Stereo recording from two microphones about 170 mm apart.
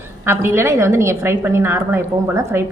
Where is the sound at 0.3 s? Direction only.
15° right (ahead or behind).